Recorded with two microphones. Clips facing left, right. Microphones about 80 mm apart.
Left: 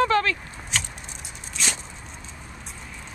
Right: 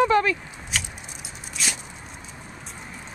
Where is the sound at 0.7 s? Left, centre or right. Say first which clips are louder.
Even; centre.